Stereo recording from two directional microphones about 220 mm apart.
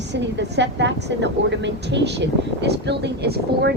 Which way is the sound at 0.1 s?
50° right (ahead or behind).